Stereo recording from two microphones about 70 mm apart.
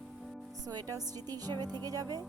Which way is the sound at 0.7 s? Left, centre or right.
Right.